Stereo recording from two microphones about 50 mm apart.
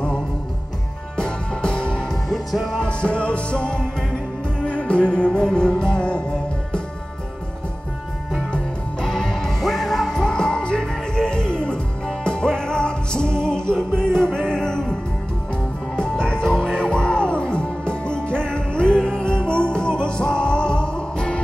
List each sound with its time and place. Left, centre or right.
1.1 s music: centre
2.0 s music: centre
2.8 s music: left
9.0 s music: centre
16.0 s music: centre